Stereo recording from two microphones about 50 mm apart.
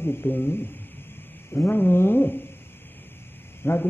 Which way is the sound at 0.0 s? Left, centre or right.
Left.